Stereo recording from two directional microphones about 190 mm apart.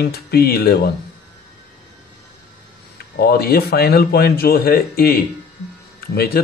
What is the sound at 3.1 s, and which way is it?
Speech, 55° left (ahead or behind).